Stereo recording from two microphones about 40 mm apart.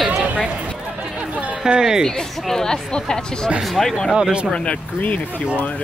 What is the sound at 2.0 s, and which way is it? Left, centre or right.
Speech, centre.